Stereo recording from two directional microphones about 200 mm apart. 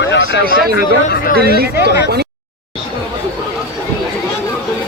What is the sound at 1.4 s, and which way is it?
Speech, 50° right (ahead or behind).